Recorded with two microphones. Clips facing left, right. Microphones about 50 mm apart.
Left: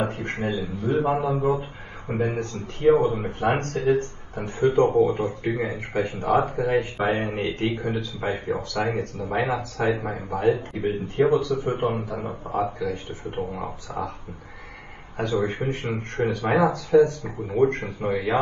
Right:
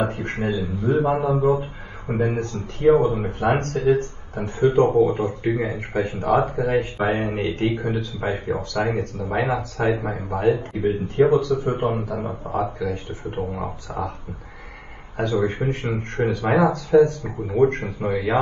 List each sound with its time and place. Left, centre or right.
0.0 s a man's voice: right
4.5 s speech: right
7.3 s a man's voice: left
7.7 s speech: right
15.1 s speech: right